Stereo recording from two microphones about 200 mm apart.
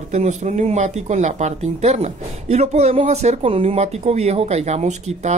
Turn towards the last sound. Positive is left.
turn(degrees=-35)  # may be behind; listen again after turning